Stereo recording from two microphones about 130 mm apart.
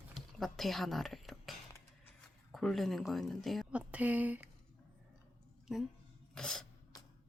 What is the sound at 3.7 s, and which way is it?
Speech, 10° right (ahead or behind).